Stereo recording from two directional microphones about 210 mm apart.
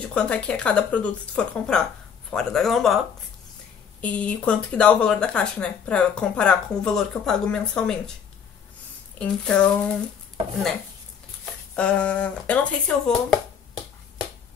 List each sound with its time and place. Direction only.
0.1 s speech: 5° left (ahead or behind)
4.0 s speech: 5° left (ahead or behind)
9.2 s speech: 5° left (ahead or behind)
11.7 s speech: 5° left (ahead or behind)